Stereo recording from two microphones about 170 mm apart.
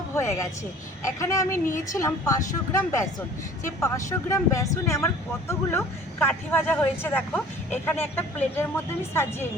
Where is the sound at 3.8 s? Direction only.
20° left (ahead or behind).